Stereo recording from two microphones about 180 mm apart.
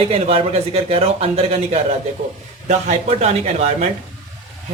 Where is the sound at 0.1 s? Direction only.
35° right (ahead or behind).